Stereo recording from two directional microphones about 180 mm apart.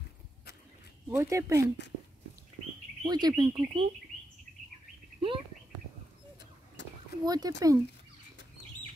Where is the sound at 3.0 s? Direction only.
20° right (ahead or behind).